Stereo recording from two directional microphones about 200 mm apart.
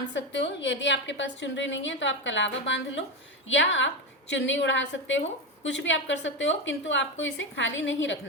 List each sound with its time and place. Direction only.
0.1 s a woman's voice: 65° left (ahead or behind)